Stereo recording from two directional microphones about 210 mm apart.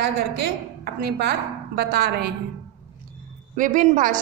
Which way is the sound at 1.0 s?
50° right (ahead or behind).